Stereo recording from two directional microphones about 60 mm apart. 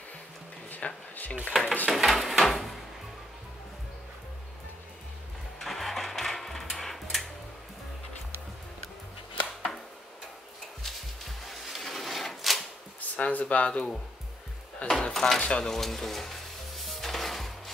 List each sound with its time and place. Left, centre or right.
0.7 s a sound: left
1.5 s stir: centre
1.9 s a sound: centre
5.6 s sewing machine: centre
10.8 s a sound: centre
13.1 s speech: left
14.9 s speech: centre
15.4 s stir: centre
16.8 s music: centre